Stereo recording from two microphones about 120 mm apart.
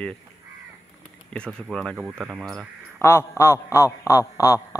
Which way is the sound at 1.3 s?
5° left (ahead or behind).